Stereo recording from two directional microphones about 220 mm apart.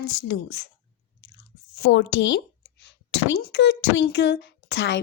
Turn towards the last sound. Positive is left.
turn(degrees=50)  # may be behind; listen again after turning